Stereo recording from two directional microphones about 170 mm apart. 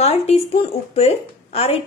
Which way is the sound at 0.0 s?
35° left (ahead or behind).